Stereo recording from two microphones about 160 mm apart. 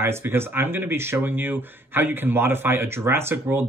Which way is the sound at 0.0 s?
15° right (ahead or behind).